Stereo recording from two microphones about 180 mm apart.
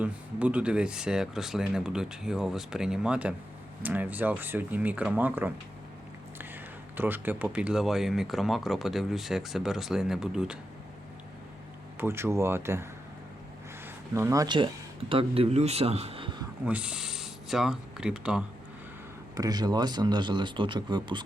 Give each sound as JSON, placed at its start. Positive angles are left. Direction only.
{"t": 0.0, "sound": "speech", "side_deg": -5}
{"t": 6.9, "sound": "speech", "side_deg": -10}
{"t": 11.9, "sound": "a man's voice", "side_deg": -15}
{"t": 16.6, "sound": "speech", "side_deg": -5}
{"t": 19.4, "sound": "speech", "side_deg": -20}